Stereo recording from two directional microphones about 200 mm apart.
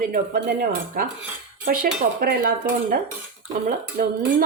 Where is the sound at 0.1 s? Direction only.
40° right (ahead or behind).